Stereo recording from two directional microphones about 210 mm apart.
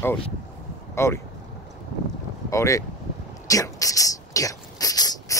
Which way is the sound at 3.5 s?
15° left (ahead or behind).